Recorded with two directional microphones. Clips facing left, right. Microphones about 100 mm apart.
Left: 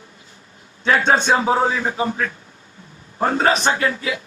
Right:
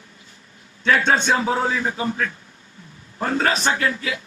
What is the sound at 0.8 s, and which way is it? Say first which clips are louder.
A man's voice: left 2 dB; 30° left (ahead or behind).